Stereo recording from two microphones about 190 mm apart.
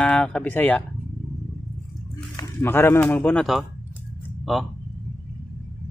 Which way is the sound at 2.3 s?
15° left (ahead or behind).